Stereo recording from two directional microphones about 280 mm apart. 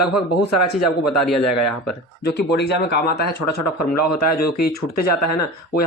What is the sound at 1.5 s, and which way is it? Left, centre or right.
Speech, left.